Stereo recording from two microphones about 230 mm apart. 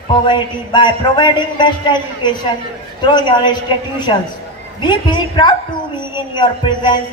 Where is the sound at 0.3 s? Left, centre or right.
Centre.